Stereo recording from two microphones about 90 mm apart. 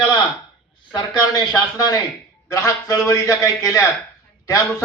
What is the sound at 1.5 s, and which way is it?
A man's voice, 45° left (ahead or behind).